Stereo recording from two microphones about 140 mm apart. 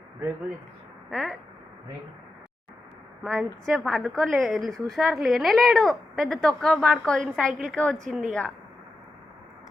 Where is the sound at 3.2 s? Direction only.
Centre (ahead or behind).